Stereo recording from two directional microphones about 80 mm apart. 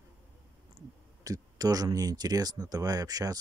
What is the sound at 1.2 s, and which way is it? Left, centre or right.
Speech, right.